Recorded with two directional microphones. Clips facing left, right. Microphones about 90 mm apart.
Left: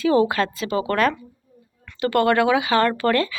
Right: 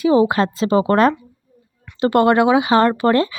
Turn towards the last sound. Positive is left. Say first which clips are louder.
# right 4 dB
turn(degrees=-25)  # may be behind; listen again after turning